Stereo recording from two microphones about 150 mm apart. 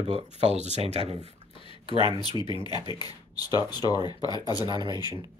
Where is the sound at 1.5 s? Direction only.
35° left (ahead or behind).